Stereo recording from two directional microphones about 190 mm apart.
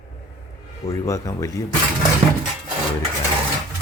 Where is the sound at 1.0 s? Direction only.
15° left (ahead or behind).